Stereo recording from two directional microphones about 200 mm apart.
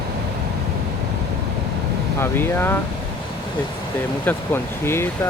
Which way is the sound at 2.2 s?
10° left (ahead or behind).